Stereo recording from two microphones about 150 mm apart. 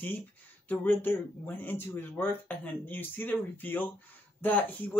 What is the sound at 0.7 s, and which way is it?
Speech, 15° left (ahead or behind).